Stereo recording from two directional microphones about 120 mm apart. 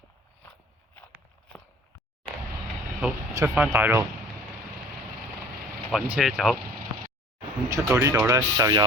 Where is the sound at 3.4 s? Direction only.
25° right (ahead or behind).